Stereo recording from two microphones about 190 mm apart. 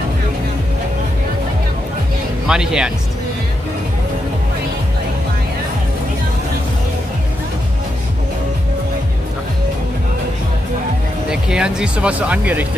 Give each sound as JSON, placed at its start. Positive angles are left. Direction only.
{"t": 2.4, "sound": "speech", "side_deg": -5}
{"t": 11.2, "sound": "speech", "side_deg": -5}